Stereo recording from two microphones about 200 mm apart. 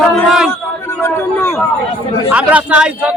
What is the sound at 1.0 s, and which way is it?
Speech, 10° left (ahead or behind).